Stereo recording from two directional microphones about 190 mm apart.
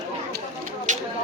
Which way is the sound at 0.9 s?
40° right (ahead or behind).